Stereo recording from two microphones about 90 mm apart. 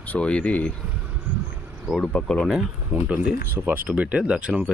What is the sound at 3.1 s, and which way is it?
Speech, 15° right (ahead or behind).